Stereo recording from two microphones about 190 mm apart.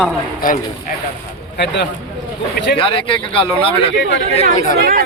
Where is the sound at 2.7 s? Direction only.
30° left (ahead or behind).